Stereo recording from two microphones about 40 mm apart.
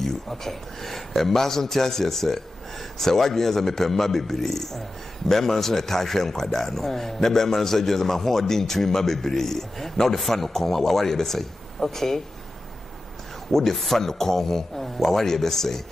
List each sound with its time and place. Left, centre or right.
0.0 s a man's voice: centre
13.5 s a man's voice: centre